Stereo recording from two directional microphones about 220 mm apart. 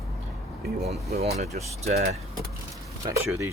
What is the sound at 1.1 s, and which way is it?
Speech, 30° right (ahead or behind).